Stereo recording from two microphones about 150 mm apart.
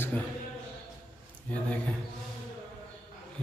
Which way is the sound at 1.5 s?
10° left (ahead or behind).